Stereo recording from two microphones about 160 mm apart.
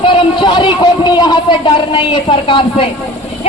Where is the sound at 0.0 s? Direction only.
30° left (ahead or behind).